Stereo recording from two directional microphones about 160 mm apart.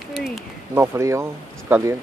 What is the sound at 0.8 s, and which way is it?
Speech, 20° right (ahead or behind).